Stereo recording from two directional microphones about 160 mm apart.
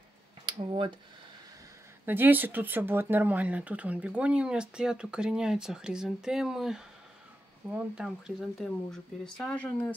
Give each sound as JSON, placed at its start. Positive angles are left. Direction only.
{"t": 0.5, "sound": "speech", "side_deg": -30}
{"t": 2.0, "sound": "speech", "side_deg": -10}